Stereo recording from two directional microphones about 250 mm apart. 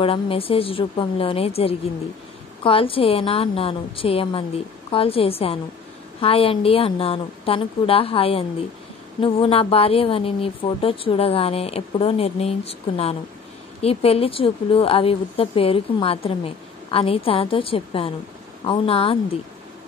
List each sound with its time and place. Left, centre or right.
0.0 s a woman's voice: left